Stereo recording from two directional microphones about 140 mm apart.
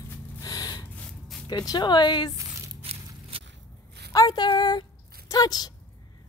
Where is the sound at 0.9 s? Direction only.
Centre (ahead or behind).